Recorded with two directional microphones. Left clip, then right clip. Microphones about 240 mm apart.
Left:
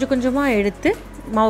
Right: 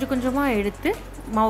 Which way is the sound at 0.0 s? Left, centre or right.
Centre.